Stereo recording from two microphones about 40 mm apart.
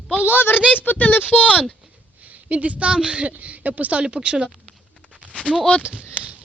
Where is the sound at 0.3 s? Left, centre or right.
Left.